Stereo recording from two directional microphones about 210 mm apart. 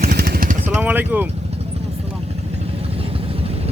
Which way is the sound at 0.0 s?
45° right (ahead or behind).